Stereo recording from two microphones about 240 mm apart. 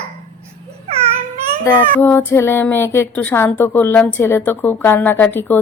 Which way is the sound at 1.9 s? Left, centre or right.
Centre.